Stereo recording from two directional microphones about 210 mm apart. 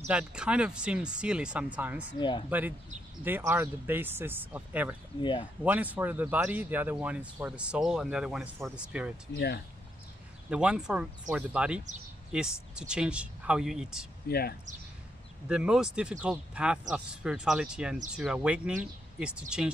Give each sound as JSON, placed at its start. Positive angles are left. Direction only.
{"t": 0.1, "sound": "speech", "side_deg": -5}
{"t": 2.1, "sound": "speech", "side_deg": 20}
{"t": 3.3, "sound": "speech", "side_deg": -10}
{"t": 5.2, "sound": "speech", "side_deg": 20}
{"t": 5.6, "sound": "speech", "side_deg": -5}
{"t": 10.5, "sound": "speech", "side_deg": -5}
{"t": 14.3, "sound": "speech", "side_deg": 50}
{"t": 15.4, "sound": "speech", "side_deg": -5}